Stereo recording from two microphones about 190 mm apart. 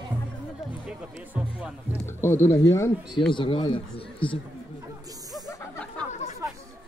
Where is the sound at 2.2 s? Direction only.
10° left (ahead or behind).